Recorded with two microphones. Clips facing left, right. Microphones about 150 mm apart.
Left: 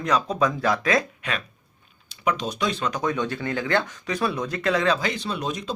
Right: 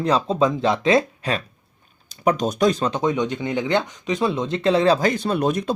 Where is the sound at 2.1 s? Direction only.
45° right (ahead or behind).